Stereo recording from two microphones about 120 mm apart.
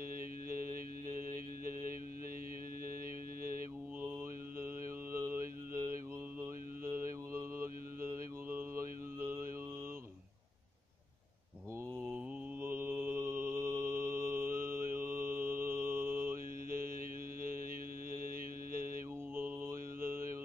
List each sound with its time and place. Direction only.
5.1 s mantra: 25° right (ahead or behind)
8.5 s mantra: 20° right (ahead or behind)
12.6 s mantra: 15° right (ahead or behind)
13.2 s mantra: 25° right (ahead or behind)
19.3 s mantra: 15° right (ahead or behind)